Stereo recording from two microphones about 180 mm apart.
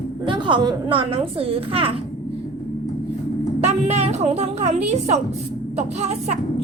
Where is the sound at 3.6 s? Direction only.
35° right (ahead or behind).